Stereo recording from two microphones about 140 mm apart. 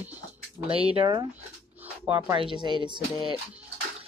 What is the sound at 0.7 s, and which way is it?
Speech, 40° right (ahead or behind).